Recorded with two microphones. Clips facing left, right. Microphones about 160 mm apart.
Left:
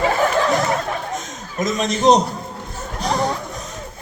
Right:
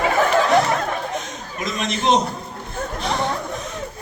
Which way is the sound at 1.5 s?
40° left (ahead or behind).